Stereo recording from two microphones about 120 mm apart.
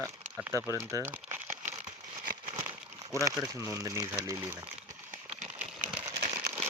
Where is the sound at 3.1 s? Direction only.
25° right (ahead or behind).